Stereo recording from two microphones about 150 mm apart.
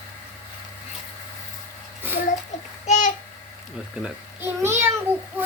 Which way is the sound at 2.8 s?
50° left (ahead or behind).